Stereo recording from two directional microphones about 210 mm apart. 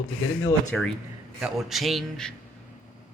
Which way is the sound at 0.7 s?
5° left (ahead or behind).